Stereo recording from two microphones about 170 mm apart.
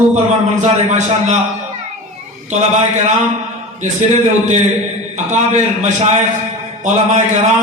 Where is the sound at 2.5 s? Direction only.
40° right (ahead or behind).